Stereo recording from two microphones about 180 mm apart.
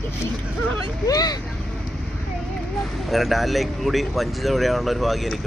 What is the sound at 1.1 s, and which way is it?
Speech, 20° left (ahead or behind).